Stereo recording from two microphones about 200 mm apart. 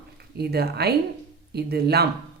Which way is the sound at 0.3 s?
55° right (ahead or behind).